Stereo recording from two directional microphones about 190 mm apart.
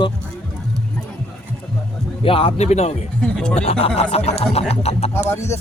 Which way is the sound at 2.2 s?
30° left (ahead or behind).